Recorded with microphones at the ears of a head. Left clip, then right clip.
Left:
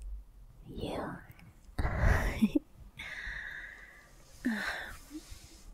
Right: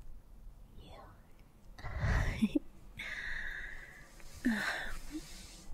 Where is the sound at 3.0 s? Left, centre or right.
Centre.